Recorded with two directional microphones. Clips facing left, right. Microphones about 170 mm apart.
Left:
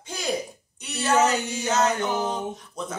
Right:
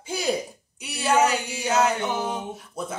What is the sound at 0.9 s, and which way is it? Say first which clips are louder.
Speech: even; 10° right (ahead or behind).